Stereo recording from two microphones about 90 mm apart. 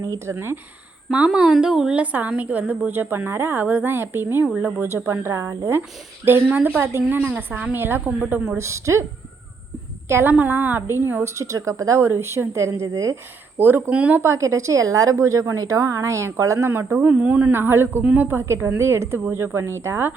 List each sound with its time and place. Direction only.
0.0 s a woman's voice: 35° right (ahead or behind)
1.1 s a woman's voice: 10° right (ahead or behind)
4.4 s speech: 15° right (ahead or behind)
4.9 s a woman's voice: 30° right (ahead or behind)
8.4 s a woman's voice: 35° right (ahead or behind)
10.1 s a woman's voice: 30° right (ahead or behind)
13.6 s a woman's voice: 25° right (ahead or behind)
17.5 s a woman's voice: 25° right (ahead or behind)